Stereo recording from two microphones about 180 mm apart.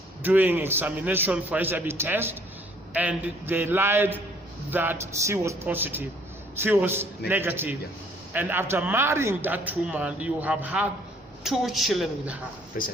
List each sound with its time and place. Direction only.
0.2 s a man's voice: 10° right (ahead or behind)
12.7 s speech: 50° left (ahead or behind)